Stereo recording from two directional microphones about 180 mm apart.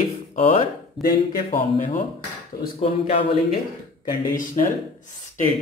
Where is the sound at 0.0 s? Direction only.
40° left (ahead or behind).